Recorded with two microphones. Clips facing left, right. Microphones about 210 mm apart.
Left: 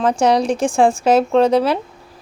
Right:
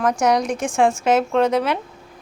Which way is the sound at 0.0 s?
30° left (ahead or behind).